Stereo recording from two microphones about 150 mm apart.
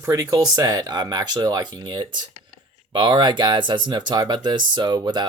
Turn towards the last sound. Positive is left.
turn(degrees=-30)  # may be behind; listen again after turning